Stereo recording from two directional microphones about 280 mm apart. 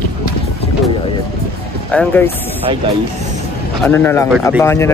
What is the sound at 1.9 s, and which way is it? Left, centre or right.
Speech, centre.